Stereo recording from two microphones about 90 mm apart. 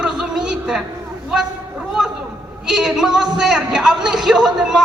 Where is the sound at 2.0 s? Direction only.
5° right (ahead or behind).